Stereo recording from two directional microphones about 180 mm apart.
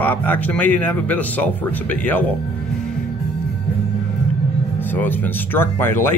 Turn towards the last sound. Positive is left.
turn(degrees=10)  # may be behind; listen again after turning